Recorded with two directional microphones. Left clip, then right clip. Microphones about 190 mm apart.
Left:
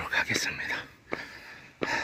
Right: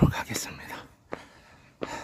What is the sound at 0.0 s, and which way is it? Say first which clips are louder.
Dog: left 2 dB; 25° right (ahead or behind).